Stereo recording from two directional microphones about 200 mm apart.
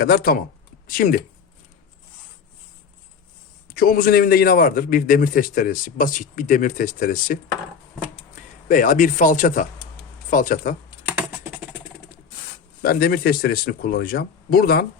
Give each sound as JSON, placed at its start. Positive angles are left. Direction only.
{"t": 0.0, "sound": "a man's voice", "side_deg": 45}
{"t": 3.8, "sound": "a man's voice", "side_deg": 50}
{"t": 8.6, "sound": "speech", "side_deg": 40}
{"t": 12.8, "sound": "a man's voice", "side_deg": 50}